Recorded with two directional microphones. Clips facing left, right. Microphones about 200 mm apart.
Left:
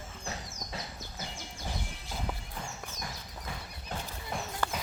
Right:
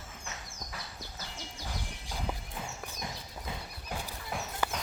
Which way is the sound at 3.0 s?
20° right (ahead or behind).